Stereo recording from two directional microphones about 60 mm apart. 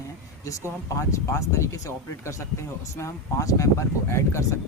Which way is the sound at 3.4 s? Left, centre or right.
Left.